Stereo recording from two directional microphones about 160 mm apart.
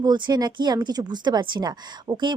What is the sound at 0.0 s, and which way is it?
Speech, 25° right (ahead or behind).